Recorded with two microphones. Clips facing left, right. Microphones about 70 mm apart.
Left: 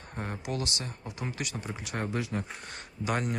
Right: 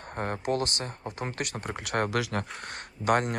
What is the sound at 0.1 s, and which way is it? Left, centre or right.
Speech, right.